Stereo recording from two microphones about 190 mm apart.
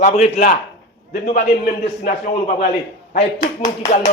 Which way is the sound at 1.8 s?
40° left (ahead or behind).